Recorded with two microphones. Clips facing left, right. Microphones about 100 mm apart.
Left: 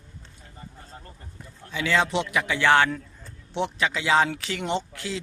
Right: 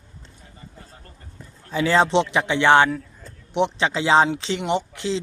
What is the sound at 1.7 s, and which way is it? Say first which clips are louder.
Speech: right 6 dB; 35° right (ahead or behind).